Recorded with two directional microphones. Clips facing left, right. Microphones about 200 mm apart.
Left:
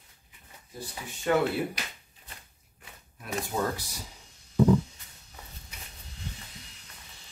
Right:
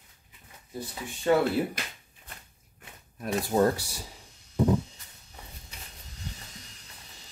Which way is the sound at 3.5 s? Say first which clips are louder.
Right 8 dB; 45° right (ahead or behind).